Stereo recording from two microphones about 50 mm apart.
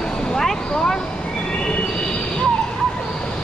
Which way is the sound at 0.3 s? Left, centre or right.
Centre.